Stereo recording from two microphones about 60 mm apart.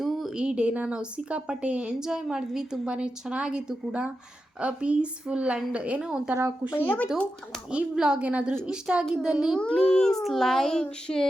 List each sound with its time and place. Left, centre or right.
0.0 s a sound: centre
0.3 s a woman's voice: centre
2.0 s a woman's voice: centre
6.7 s speech: left
7.7 s a woman's voice: centre
8.3 s a woman's voice: right
9.6 s a child's voice: centre
10.2 s a child's voice: centre